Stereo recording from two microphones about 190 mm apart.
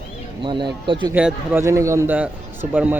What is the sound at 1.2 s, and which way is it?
A man's voice, 10° right (ahead or behind).